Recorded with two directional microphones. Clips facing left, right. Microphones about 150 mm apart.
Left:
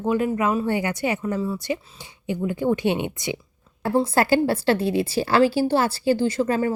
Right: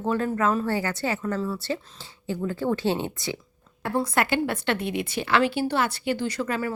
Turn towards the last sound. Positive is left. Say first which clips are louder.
# left 6 dB
turn(degrees=30)  # may be behind; listen again after turning